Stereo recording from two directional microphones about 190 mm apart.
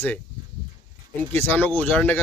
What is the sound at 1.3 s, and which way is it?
Speech, 10° left (ahead or behind).